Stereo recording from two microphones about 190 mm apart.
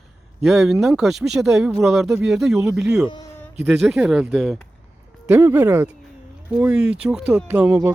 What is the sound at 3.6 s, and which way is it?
Speech, centre (ahead or behind).